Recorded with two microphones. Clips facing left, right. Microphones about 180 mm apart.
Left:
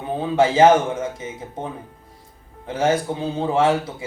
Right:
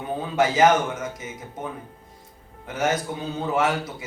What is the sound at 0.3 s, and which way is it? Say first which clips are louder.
A man's voice: left 4 dB; 30° left (ahead or behind).